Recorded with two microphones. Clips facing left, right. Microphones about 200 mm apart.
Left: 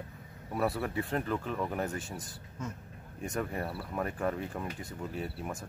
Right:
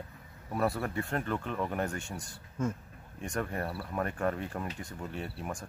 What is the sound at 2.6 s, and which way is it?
Speech, 50° right (ahead or behind).